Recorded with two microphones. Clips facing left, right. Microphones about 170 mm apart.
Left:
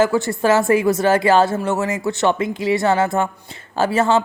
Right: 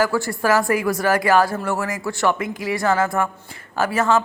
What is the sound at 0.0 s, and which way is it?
Speech, 25° left (ahead or behind).